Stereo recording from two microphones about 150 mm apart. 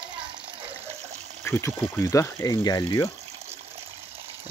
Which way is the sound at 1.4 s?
15° left (ahead or behind).